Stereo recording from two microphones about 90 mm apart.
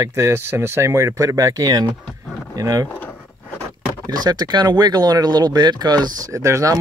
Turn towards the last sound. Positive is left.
turn(degrees=-35)  # may be behind; listen again after turning